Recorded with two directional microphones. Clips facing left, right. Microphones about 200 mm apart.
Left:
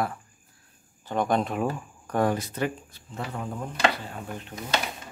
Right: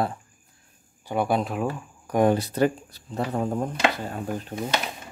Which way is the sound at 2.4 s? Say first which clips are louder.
Right 7 dB; 35° right (ahead or behind).